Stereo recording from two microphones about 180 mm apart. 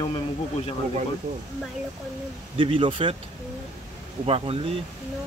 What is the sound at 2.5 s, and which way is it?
Speech, 30° right (ahead or behind).